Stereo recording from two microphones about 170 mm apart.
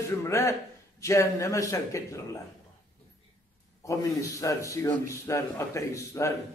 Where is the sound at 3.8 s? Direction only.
20° left (ahead or behind).